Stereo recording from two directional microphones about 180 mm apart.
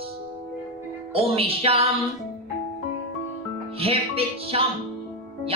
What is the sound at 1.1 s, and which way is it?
Music, 35° right (ahead or behind).